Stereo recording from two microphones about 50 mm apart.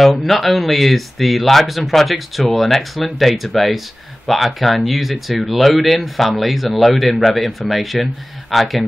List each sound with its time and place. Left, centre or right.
0.0 s speech: centre